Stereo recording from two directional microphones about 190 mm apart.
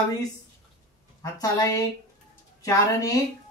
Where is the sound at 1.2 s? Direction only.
20° left (ahead or behind).